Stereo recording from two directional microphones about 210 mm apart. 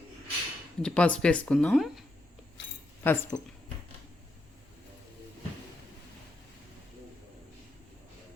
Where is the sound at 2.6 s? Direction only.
60° left (ahead or behind).